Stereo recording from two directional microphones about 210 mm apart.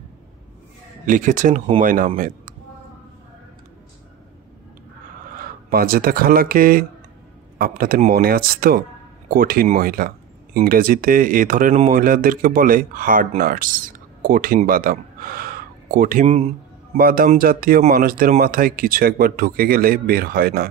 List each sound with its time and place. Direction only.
1.0 s speech: 40° right (ahead or behind)
5.3 s speech: 45° right (ahead or behind)
16.3 s speech: 30° right (ahead or behind)
16.9 s speech: 45° right (ahead or behind)